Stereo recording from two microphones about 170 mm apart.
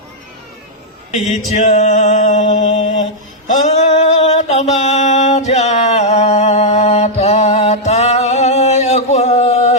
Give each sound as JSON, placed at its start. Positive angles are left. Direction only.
{"t": 1.5, "sound": "music", "side_deg": 40}
{"t": 2.5, "sound": "mantra", "side_deg": 40}
{"t": 3.4, "sound": "a sound", "side_deg": 40}